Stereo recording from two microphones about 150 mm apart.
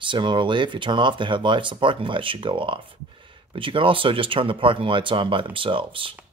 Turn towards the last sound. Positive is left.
turn(degrees=-35)  # may be behind; listen again after turning